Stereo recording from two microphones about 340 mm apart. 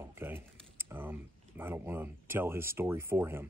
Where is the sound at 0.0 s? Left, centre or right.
Centre.